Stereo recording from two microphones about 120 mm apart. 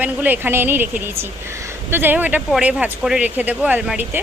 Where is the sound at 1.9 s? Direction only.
15° right (ahead or behind).